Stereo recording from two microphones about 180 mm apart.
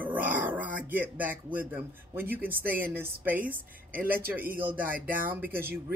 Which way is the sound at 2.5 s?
55° right (ahead or behind).